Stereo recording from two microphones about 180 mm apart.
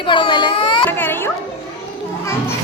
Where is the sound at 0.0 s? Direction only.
25° left (ahead or behind).